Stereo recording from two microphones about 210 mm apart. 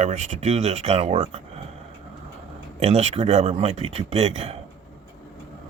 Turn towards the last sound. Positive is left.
turn(degrees=-30)  # may be behind; listen again after turning